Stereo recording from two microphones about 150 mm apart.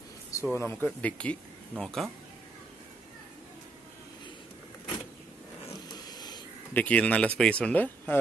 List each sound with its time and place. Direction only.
0.3 s speech: 20° left (ahead or behind)
6.0 s a sound: 25° left (ahead or behind)
6.7 s speech: 10° left (ahead or behind)